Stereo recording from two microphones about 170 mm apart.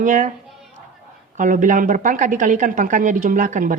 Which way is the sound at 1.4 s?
50° right (ahead or behind).